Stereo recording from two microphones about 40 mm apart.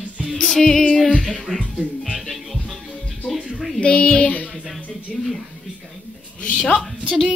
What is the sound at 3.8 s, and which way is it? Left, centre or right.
Speech, left.